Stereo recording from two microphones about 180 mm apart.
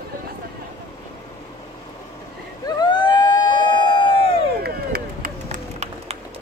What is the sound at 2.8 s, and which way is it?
Emergency vehicle, 25° left (ahead or behind).